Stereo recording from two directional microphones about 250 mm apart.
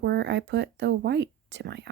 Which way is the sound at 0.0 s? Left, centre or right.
Right.